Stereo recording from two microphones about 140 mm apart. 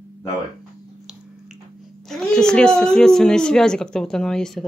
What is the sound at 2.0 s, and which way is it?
A woman's voice, 5° left (ahead or behind).